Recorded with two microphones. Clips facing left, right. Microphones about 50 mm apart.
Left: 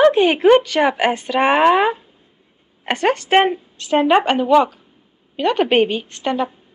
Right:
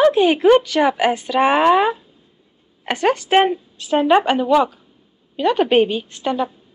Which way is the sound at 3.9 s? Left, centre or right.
Left.